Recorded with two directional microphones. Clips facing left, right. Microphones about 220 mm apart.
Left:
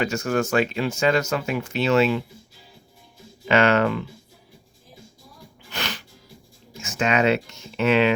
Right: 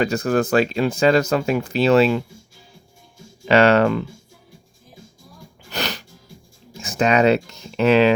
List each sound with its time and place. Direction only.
0.0 s speech: 35° right (ahead or behind)
3.5 s speech: 35° right (ahead or behind)
5.7 s music: 40° right (ahead or behind)
6.7 s speech: 35° right (ahead or behind)